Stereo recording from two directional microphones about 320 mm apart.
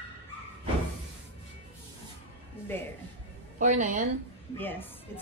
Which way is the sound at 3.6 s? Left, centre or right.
Right.